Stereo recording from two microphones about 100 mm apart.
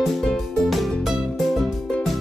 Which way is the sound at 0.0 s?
Centre (ahead or behind).